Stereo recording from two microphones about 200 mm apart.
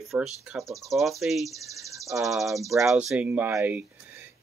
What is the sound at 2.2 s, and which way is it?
Speech, centre (ahead or behind).